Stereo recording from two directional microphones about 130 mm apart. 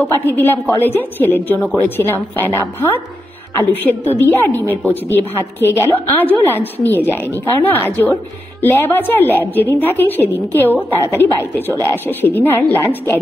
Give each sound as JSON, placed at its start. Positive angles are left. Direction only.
{"t": 0.0, "sound": "a woman's voice", "side_deg": 15}